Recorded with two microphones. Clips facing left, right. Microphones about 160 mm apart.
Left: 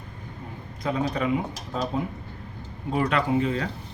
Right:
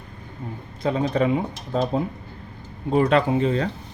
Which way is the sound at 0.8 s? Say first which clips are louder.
Right 5 dB; 30° right (ahead or behind).